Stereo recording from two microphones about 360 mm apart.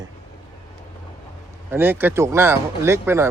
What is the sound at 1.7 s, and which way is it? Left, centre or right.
Speech, centre.